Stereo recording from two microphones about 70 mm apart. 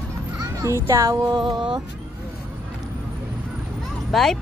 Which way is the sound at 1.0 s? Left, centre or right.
Right.